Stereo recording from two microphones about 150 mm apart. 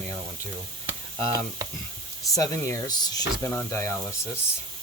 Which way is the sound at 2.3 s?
20° left (ahead or behind).